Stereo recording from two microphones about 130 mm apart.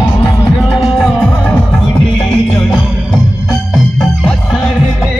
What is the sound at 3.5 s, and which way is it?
Music, 5° left (ahead or behind).